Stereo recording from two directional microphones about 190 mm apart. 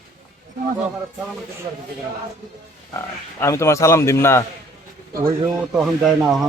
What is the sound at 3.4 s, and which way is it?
A man's voice, 15° left (ahead or behind).